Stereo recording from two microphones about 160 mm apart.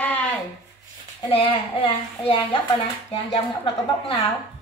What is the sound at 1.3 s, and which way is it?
Speech, 35° left (ahead or behind).